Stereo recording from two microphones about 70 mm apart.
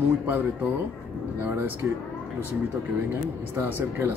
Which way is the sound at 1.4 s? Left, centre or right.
Right.